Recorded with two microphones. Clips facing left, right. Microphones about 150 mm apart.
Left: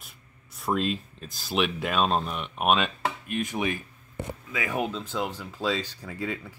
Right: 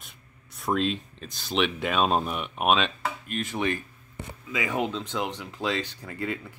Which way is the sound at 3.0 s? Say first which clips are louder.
Left 2 dB; 15° left (ahead or behind).